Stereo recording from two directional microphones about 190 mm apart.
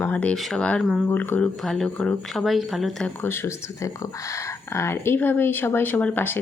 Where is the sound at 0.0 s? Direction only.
5° left (ahead or behind).